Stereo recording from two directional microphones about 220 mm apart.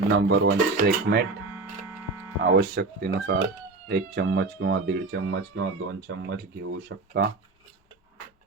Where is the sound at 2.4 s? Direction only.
55° right (ahead or behind).